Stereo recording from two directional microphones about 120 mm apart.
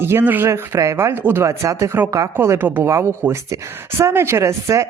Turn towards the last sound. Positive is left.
turn(degrees=-25)  # may be behind; listen again after turning